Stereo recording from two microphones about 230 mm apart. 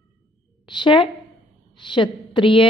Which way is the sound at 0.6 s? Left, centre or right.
Centre.